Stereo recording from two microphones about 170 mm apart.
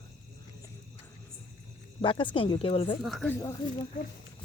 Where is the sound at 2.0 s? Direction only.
30° left (ahead or behind).